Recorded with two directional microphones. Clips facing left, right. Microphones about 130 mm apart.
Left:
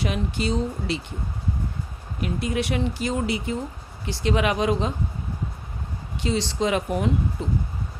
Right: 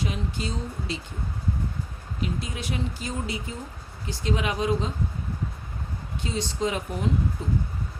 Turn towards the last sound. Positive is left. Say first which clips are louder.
# left 2 dB
turn(degrees=75)  # may be behind; listen again after turning